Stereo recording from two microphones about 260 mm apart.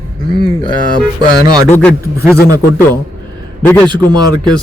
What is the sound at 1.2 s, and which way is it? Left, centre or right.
Speech, centre.